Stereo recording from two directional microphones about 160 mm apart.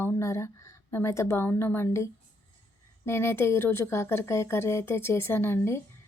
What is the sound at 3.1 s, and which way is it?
A woman's voice, 15° left (ahead or behind).